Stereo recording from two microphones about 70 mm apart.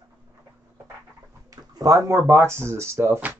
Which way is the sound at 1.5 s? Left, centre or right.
Right.